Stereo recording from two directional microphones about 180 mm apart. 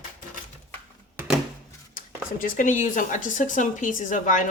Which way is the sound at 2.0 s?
50° left (ahead or behind).